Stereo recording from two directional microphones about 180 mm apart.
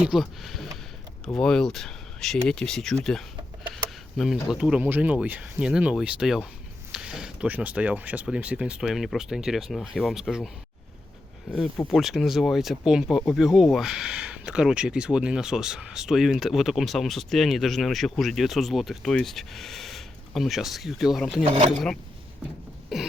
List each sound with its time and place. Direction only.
0.0 s speech: centre (ahead or behind)
11.9 s speech: centre (ahead or behind)
21.4 s speech: 35° right (ahead or behind)
21.7 s speech: 5° left (ahead or behind)